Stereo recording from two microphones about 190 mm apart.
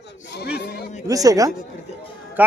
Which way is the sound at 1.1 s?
20° right (ahead or behind).